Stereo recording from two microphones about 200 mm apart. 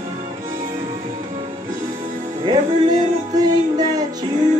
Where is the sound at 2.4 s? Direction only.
20° right (ahead or behind).